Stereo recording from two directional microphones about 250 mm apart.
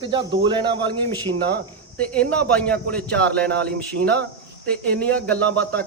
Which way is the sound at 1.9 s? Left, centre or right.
Centre.